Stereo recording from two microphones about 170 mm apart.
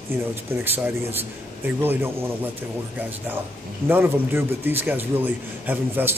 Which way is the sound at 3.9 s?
10° right (ahead or behind).